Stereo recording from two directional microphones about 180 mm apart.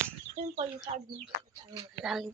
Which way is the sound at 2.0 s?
Centre (ahead or behind).